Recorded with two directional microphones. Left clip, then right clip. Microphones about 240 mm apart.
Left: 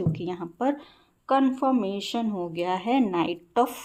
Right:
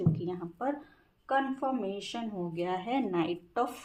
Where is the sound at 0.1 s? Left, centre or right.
Left.